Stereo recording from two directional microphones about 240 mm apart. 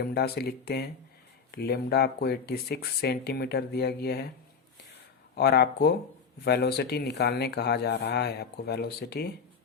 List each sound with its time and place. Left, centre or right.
0.0 s speech: left
5.4 s speech: left